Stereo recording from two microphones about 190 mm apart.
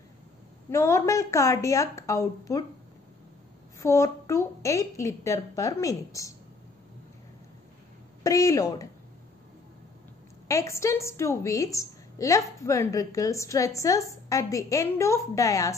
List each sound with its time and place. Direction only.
0.7 s a woman's voice: 15° left (ahead or behind)
3.8 s a woman's voice: 15° left (ahead or behind)
8.2 s a woman's voice: 15° left (ahead or behind)
10.5 s a woman's voice: 15° left (ahead or behind)